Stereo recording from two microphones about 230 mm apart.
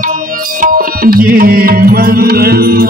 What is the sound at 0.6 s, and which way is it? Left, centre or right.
Tabla, right.